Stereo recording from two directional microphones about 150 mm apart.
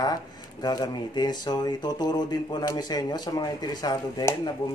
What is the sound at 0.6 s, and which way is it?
Speech, 25° left (ahead or behind).